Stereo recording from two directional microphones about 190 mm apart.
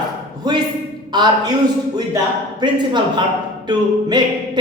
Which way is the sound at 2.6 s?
25° right (ahead or behind).